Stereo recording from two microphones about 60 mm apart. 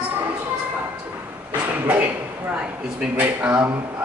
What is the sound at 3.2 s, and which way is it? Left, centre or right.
Speech, right.